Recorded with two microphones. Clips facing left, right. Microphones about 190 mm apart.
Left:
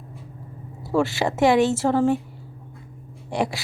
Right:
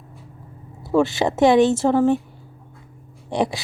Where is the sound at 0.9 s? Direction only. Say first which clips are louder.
Right 3 dB; 20° right (ahead or behind).